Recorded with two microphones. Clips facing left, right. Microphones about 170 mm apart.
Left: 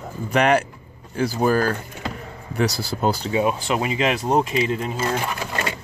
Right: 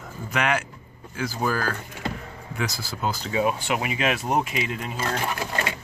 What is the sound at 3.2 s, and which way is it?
Speech, 25° left (ahead or behind).